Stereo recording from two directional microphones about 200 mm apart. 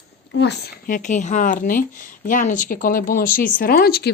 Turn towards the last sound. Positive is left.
turn(degrees=50)  # may be behind; listen again after turning